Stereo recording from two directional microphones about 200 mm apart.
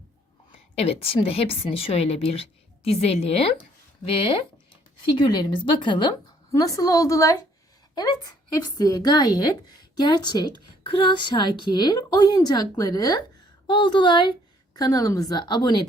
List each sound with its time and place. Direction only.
0.8 s a woman's voice: 30° left (ahead or behind)